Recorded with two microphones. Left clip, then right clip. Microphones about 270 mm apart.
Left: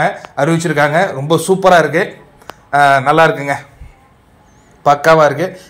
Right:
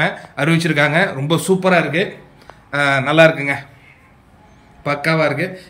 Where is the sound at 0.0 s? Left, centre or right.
Centre.